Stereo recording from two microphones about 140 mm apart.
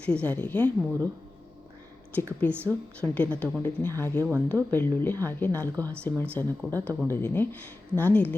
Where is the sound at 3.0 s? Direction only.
10° left (ahead or behind).